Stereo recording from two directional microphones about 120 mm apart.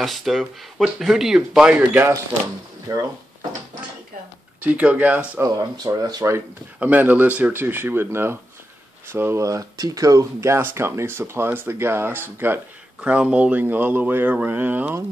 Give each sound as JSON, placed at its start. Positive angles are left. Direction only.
{"t": 0.0, "sound": "speech", "side_deg": 0}
{"t": 2.9, "sound": "speech", "side_deg": -30}
{"t": 4.6, "sound": "speech", "side_deg": -10}
{"t": 5.4, "sound": "speech", "side_deg": -30}